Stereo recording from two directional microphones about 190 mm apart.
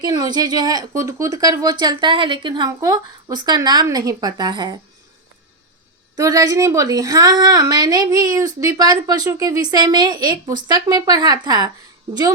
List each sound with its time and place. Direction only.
0.0 s speech: 20° right (ahead or behind)
6.1 s speech: 20° right (ahead or behind)